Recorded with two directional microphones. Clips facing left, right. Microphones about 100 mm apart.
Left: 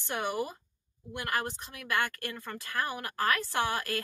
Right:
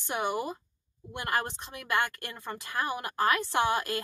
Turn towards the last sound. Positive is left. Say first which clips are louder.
# right 3 dB
turn(degrees=-20)  # may be behind; listen again after turning